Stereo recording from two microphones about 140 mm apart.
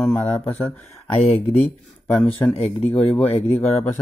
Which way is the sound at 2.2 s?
10° left (ahead or behind).